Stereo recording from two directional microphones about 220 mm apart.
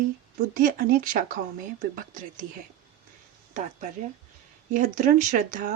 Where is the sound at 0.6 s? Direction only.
40° right (ahead or behind).